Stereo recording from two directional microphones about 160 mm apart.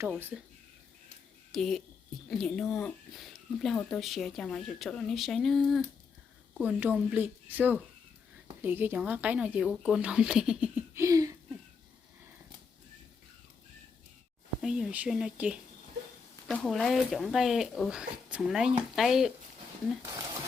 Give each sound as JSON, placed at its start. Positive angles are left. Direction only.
{"t": 0.3, "sound": "speech", "side_deg": -5}
{"t": 1.5, "sound": "speech", "side_deg": 0}
{"t": 6.6, "sound": "speech", "side_deg": -10}
{"t": 10.9, "sound": "a sound", "side_deg": -20}
{"t": 14.6, "sound": "speech", "side_deg": -5}